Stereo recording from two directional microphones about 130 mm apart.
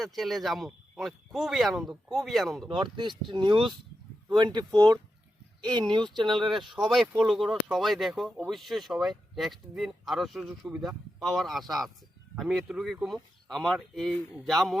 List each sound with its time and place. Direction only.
0.0 s speech: centre (ahead or behind)
2.6 s speech: 40° right (ahead or behind)
6.7 s speech: centre (ahead or behind)